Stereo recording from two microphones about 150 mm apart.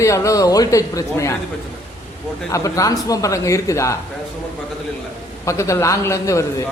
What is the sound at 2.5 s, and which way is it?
A man's voice, 20° left (ahead or behind).